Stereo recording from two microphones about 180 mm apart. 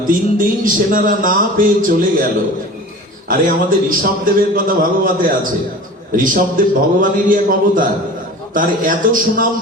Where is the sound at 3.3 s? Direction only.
50° right (ahead or behind).